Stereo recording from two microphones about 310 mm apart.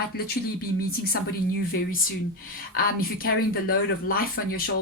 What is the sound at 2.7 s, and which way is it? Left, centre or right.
Speech, left.